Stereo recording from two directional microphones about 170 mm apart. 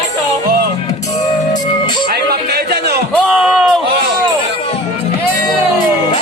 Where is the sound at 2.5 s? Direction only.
70° right (ahead or behind).